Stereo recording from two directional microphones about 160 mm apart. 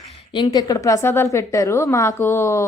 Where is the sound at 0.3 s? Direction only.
25° left (ahead or behind).